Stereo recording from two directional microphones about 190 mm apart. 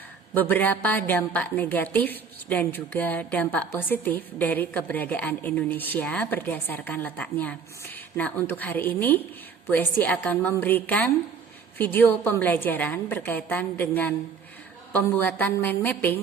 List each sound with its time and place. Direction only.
0.3 s a woman's voice: 10° left (ahead or behind)